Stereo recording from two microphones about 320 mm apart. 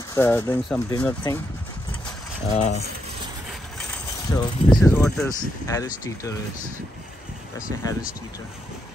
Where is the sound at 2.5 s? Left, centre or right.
Centre.